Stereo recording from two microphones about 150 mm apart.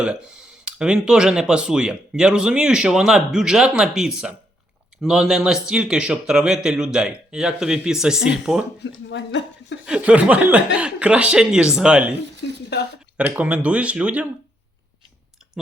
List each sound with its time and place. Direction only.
0.6 s speech: 5° right (ahead or behind)
9.8 s speech: 5° right (ahead or behind)
13.1 s speech: 10° right (ahead or behind)